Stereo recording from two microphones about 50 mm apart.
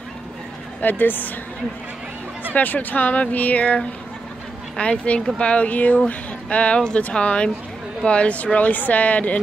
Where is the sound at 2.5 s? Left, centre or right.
Left.